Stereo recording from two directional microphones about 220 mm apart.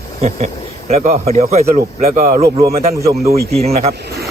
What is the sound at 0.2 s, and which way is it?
A man's voice, 30° right (ahead or behind).